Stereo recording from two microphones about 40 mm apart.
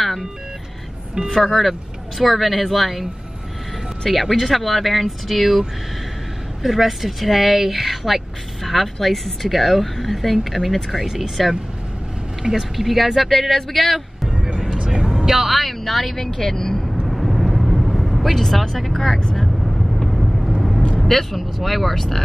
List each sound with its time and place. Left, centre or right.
1.3 s a woman's voice: centre
12.5 s a woman's voice: centre
14.8 s vehicle: centre
15.2 s speech: centre
17.1 s vehicle: centre
21.0 s a woman's voice: centre